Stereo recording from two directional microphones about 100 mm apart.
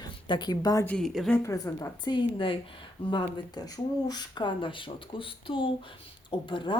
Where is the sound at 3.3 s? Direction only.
40° left (ahead or behind).